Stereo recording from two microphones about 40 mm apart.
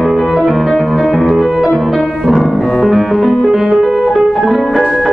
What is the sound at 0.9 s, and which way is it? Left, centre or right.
Music, centre.